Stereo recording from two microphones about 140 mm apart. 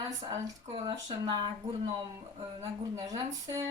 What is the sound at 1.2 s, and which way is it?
Speech, 30° right (ahead or behind).